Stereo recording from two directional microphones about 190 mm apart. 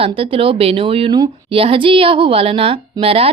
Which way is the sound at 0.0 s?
30° right (ahead or behind).